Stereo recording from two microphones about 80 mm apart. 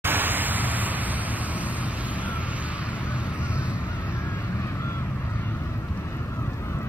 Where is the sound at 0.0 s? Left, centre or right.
Right.